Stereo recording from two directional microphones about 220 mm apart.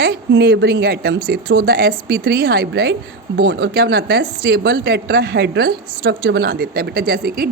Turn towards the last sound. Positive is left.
turn(degrees=-45)  # may be behind; listen again after turning